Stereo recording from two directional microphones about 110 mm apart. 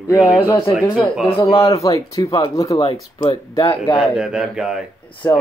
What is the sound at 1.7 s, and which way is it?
Speech, 30° left (ahead or behind).